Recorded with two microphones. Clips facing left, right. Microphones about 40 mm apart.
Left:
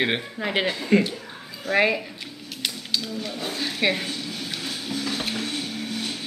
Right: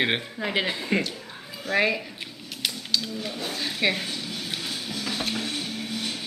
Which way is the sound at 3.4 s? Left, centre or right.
Centre.